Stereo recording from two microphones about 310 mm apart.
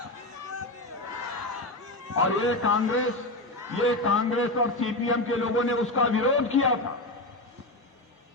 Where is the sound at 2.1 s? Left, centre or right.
Left.